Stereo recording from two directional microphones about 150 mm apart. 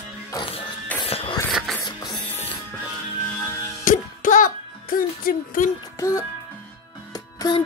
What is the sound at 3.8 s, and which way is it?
Music, 60° left (ahead or behind).